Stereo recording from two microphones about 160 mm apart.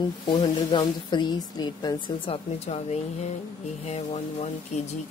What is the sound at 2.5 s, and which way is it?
Speech, 40° left (ahead or behind).